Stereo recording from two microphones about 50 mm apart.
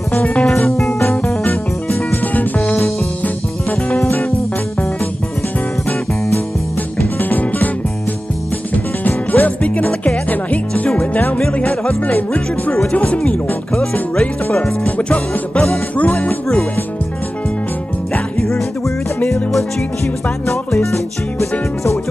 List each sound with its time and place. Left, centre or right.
0.2 s speech: left
0.7 s music: centre
2.3 s music: left
4.0 s music: left
7.2 s music: left
9.0 s music: left
11.5 s speech: left
12.0 s music: left
12.9 s speech: left
16.0 s music: left
20.7 s music: centre